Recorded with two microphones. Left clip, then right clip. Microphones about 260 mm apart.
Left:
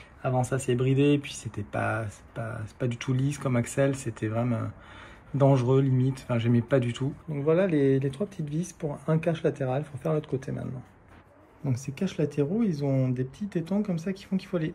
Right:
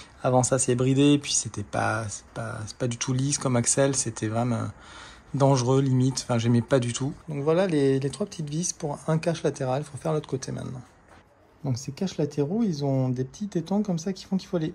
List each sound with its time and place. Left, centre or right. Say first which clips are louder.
0.2 s speech: right 6 dB; right